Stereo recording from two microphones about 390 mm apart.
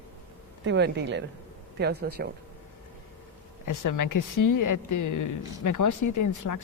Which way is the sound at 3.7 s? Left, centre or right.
Left.